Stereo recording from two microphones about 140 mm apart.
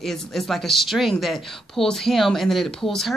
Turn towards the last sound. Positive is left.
turn(degrees=0)  # may be behind; listen again after turning